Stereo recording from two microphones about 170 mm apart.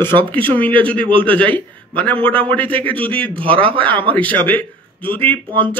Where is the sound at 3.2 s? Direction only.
30° right (ahead or behind).